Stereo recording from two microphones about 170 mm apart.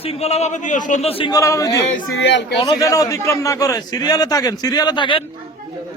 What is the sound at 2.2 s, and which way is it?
Speech, 90° left.